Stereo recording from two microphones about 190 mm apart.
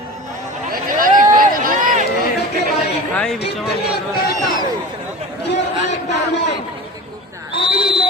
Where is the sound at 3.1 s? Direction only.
5° left (ahead or behind).